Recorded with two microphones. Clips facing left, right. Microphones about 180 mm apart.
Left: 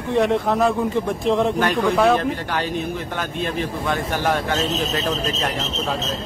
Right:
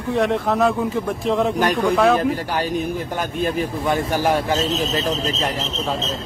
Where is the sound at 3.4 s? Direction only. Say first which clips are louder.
Right 4 dB; 45° right (ahead or behind).